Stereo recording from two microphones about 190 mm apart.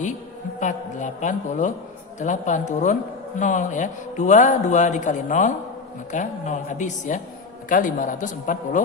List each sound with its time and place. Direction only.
0.6 s a woman's voice: 40° left (ahead or behind)